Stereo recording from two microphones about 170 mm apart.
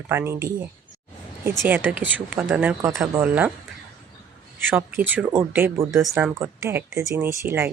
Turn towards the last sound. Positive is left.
turn(degrees=-15)  # may be behind; listen again after turning